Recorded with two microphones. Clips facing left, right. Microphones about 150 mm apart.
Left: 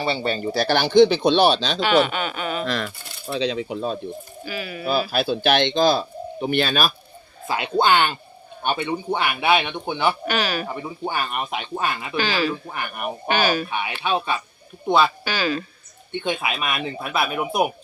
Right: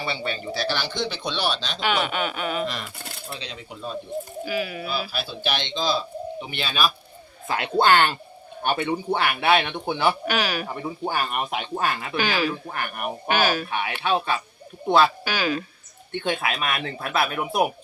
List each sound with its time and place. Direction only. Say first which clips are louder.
0.0 s speech: left 6 dB; 30° left (ahead or behind); by 1.8 s 75° left (ahead or behind)
1.8 s speech: left 4 dB; 5° right (ahead or behind)
2.6 s speech: left 5 dB; 90° left
4.4 s speech: right 1 dB; 5° right (ahead or behind)
4.9 s speech: left 8 dB; 55° left (ahead or behind)
7.4 s speech: even; 5° left (ahead or behind)
12.1 s speech: left 3 dB; 15° right (ahead or behind)
12.6 s speech: left 1 dB; centre (ahead or behind)